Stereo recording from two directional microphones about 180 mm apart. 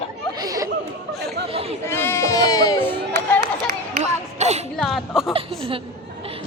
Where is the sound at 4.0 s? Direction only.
40° right (ahead or behind).